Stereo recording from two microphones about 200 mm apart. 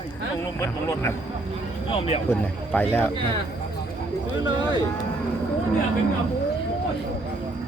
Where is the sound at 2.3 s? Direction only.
10° left (ahead or behind).